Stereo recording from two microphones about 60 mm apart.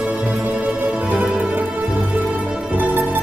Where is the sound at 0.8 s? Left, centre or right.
Right.